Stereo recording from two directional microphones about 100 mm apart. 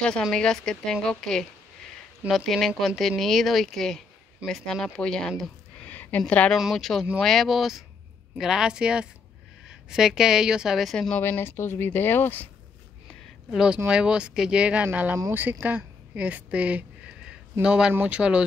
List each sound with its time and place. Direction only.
0.0 s a woman's voice: 10° left (ahead or behind)
5.9 s a sound: 20° left (ahead or behind)
6.5 s a woman's voice: centre (ahead or behind)
11.2 s speech: 20° left (ahead or behind)
13.5 s a woman's voice: 5° right (ahead or behind)